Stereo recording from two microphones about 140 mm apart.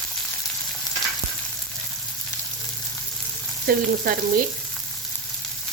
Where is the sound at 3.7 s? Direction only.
90° right.